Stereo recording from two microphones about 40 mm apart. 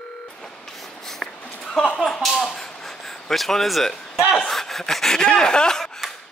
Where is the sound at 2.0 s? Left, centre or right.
Centre.